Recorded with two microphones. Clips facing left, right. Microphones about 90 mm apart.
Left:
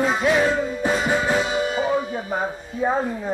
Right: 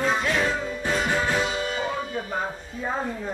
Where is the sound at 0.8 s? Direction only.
15° left (ahead or behind).